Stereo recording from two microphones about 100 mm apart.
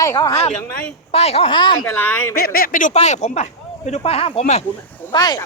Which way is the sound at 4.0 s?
75° left (ahead or behind).